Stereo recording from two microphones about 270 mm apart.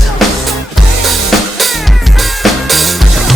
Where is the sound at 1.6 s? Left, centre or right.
Centre.